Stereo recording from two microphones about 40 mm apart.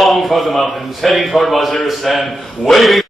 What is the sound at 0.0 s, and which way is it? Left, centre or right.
A man's voice, centre.